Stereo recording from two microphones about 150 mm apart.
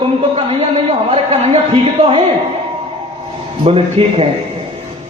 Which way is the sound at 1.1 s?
40° right (ahead or behind).